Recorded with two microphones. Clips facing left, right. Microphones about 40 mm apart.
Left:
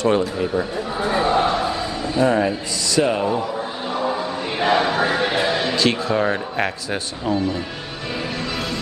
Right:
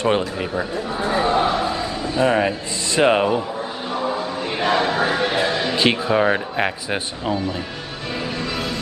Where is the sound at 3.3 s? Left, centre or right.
Centre.